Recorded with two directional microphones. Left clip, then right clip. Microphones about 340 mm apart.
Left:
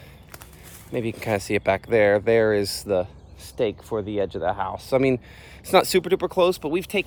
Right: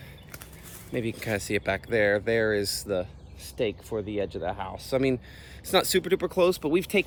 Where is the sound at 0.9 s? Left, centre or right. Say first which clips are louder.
Left 5 dB; centre.